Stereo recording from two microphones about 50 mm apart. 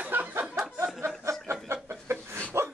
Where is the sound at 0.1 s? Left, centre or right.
Right.